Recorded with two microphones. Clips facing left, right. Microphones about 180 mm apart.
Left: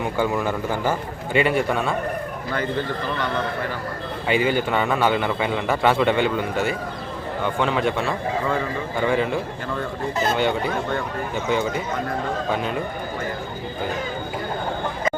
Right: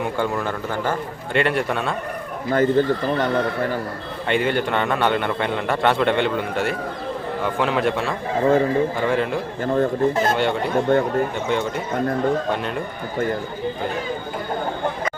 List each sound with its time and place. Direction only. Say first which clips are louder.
0.0 s a man's voice: left 1 dB; 5° left (ahead or behind)
2.5 s a man's voice: right 9 dB; 45° right (ahead or behind)
4.3 s a man's voice: even; centre (ahead or behind)
8.4 s a man's voice: right 10 dB; 40° right (ahead or behind)
9.0 s a man's voice: even; centre (ahead or behind)
9.7 s a man's voice: right 8 dB; 45° right (ahead or behind)
10.3 s a man's voice: right 1 dB; centre (ahead or behind)
10.9 s a man's voice: right 8 dB; 45° right (ahead or behind)
11.4 s a man's voice: even; centre (ahead or behind)